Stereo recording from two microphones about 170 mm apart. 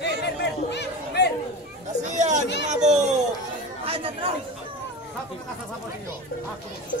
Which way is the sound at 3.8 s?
35° right (ahead or behind).